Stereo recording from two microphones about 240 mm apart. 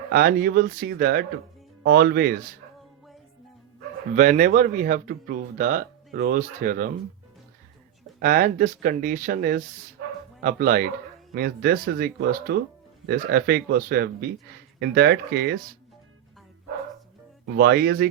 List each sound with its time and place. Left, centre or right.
0.1 s speech: right
4.1 s speech: right
8.2 s speech: right
17.4 s speech: right